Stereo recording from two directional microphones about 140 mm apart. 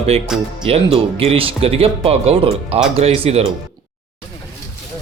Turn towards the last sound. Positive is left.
turn(degrees=-45)  # may be behind; listen again after turning